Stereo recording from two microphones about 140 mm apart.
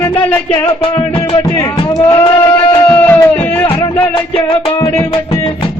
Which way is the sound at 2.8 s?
10° left (ahead or behind).